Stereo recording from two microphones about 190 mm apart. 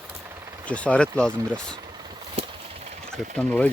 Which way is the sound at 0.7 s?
5° left (ahead or behind).